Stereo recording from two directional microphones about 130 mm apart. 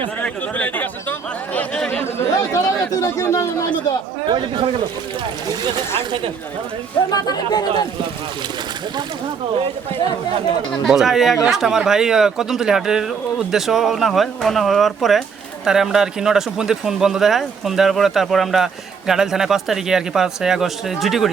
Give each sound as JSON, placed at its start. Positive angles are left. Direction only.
{"t": 0.2, "sound": "speech", "side_deg": 10}
{"t": 1.5, "sound": "a sound", "side_deg": 10}
{"t": 2.9, "sound": "speech", "side_deg": 25}
{"t": 4.3, "sound": "speech", "side_deg": -40}
{"t": 7.1, "sound": "speech", "side_deg": 30}
{"t": 10.7, "sound": "speech", "side_deg": 0}